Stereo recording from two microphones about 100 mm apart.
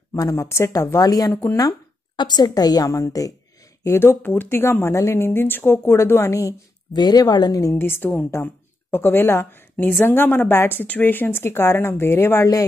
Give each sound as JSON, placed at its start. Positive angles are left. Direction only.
{"t": 0.1, "sound": "speech", "side_deg": 30}
{"t": 1.3, "sound": "speech", "side_deg": 25}
{"t": 1.7, "sound": "a woman's voice", "side_deg": 50}
{"t": 3.8, "sound": "speech", "side_deg": 25}
{"t": 7.7, "sound": "speech", "side_deg": 20}